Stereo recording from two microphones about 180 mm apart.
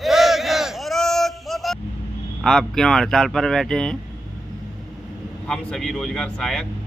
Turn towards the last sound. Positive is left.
turn(degrees=5)  # may be behind; listen again after turning